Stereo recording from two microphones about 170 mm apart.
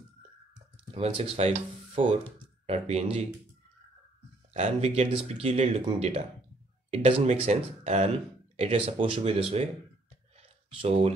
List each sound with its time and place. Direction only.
0.9 s speech: 35° right (ahead or behind)
4.6 s speech: 40° right (ahead or behind)
10.8 s speech: 35° right (ahead or behind)